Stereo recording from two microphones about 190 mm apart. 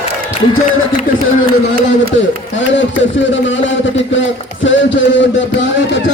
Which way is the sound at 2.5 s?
75° left (ahead or behind).